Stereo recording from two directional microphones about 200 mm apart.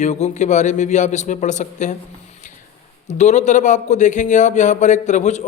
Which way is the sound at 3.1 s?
35° left (ahead or behind).